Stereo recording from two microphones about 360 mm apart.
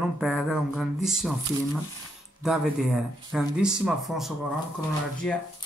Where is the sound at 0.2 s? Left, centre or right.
Centre.